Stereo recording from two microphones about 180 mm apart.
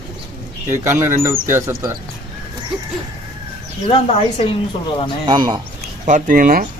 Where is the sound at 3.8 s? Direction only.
35° left (ahead or behind).